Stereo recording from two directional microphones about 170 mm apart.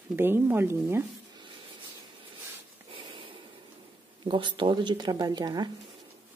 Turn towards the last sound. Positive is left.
turn(degrees=-25)  # may be behind; listen again after turning